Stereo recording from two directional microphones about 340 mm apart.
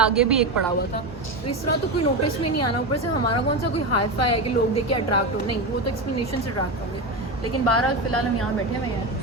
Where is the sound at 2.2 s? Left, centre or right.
Left.